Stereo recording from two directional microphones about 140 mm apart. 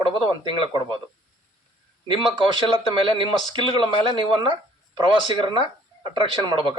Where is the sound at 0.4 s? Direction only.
35° right (ahead or behind).